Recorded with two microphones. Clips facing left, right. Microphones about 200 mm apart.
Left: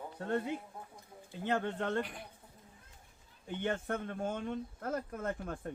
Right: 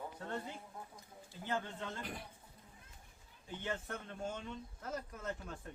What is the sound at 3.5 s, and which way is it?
Speech, 55° left (ahead or behind).